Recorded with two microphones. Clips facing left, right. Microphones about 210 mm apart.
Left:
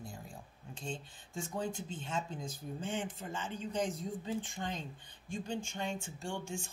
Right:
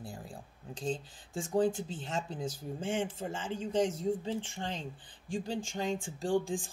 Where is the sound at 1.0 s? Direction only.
90° right.